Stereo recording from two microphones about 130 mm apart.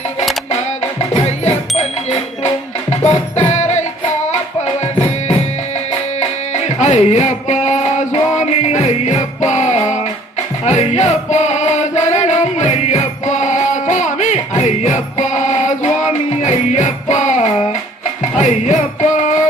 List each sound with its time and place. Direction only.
0.9 s music: 55° left (ahead or behind)